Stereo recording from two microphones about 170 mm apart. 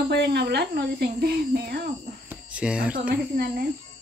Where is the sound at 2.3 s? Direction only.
5° right (ahead or behind).